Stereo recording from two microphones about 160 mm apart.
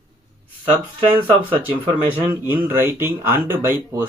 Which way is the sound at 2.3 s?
15° right (ahead or behind).